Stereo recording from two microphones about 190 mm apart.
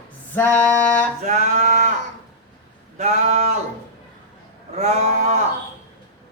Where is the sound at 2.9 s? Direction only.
35° right (ahead or behind).